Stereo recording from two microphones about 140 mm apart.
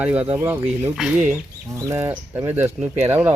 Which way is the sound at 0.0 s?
10° right (ahead or behind).